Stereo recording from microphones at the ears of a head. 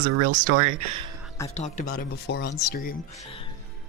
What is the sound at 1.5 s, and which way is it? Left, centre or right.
Speech, left.